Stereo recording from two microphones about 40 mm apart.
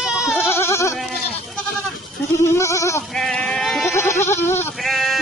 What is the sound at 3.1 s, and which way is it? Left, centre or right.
Sheep, centre.